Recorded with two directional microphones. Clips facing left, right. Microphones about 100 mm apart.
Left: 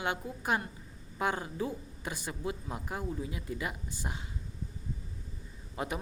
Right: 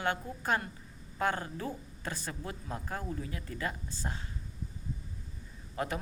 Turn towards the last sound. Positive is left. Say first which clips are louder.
# right 1 dB
turn(degrees=15)  # may be behind; listen again after turning